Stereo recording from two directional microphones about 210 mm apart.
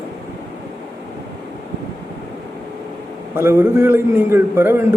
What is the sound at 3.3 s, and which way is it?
A man's voice, 10° right (ahead or behind).